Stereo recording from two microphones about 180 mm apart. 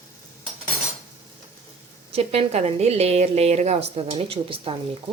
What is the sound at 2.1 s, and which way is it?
A woman's voice, 35° right (ahead or behind).